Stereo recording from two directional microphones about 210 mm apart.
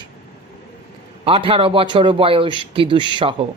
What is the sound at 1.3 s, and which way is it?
Speech, 25° right (ahead or behind).